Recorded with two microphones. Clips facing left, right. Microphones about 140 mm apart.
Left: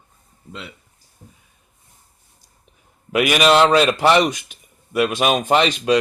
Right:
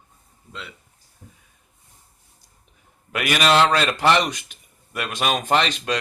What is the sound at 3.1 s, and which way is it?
Speech, 15° left (ahead or behind).